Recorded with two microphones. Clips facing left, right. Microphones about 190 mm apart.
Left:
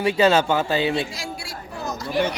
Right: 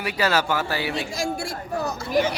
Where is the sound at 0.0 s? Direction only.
25° left (ahead or behind).